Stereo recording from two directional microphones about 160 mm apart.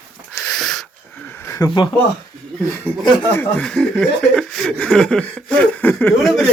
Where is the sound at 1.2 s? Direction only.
15° left (ahead or behind).